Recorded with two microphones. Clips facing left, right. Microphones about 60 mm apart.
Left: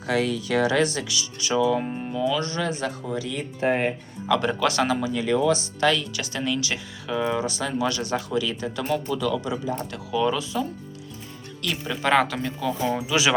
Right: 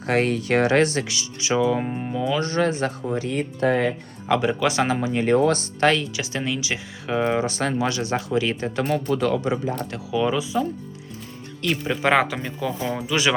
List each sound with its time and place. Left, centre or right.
0.0 s speech: right
3.6 s speech: right
4.4 s speech: centre
4.8 s speech: right
5.2 s speech: right
6.1 s speech: right
7.1 s speech: right
10.1 s speech: centre
13.0 s speech: centre